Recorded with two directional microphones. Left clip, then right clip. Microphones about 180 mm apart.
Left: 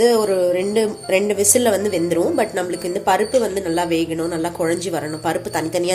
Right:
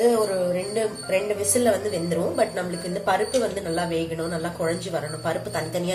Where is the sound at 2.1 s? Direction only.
55° left (ahead or behind).